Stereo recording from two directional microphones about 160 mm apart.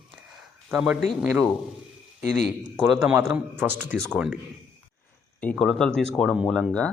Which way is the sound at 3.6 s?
10° right (ahead or behind).